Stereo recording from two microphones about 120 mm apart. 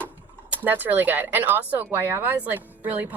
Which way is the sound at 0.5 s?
15° right (ahead or behind).